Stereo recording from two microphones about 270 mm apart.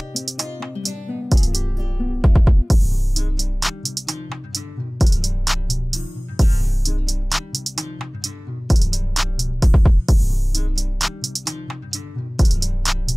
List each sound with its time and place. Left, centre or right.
0.1 s music: centre